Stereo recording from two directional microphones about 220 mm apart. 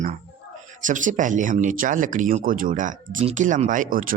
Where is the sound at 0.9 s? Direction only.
35° right (ahead or behind).